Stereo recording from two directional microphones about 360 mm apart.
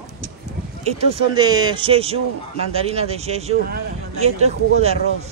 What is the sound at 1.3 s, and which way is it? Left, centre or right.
Speech, centre.